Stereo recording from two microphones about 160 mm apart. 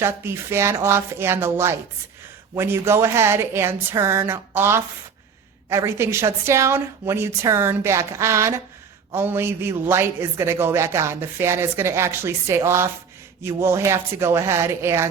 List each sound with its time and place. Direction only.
0.0 s a man's voice: 15° right (ahead or behind)